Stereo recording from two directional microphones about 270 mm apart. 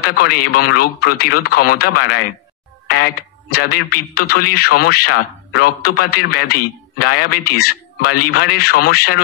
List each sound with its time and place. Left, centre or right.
0.0 s speech: left